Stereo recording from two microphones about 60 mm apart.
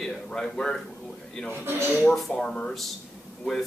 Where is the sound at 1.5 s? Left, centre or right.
Right.